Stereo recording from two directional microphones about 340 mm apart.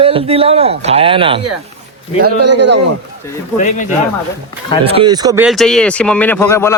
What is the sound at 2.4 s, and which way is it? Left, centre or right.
Speech, right.